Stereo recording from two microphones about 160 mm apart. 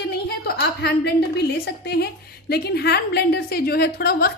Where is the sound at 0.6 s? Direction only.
90° left.